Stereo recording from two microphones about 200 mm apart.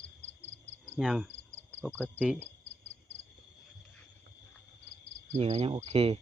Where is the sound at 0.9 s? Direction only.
5° right (ahead or behind).